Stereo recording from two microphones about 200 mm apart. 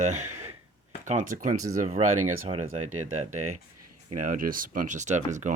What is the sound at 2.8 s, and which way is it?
Speech, 90° right.